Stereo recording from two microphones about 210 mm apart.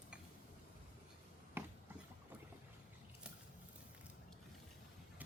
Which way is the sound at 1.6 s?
10° right (ahead or behind).